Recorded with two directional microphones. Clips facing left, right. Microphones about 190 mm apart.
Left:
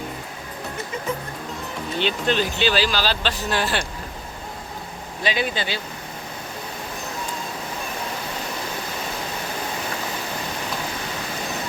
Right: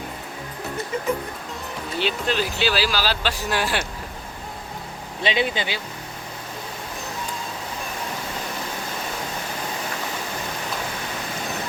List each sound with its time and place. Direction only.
2.0 s speech: 5° right (ahead or behind)
5.2 s speech: 25° right (ahead or behind)